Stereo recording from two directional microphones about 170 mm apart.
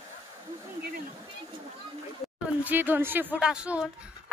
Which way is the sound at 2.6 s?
10° right (ahead or behind).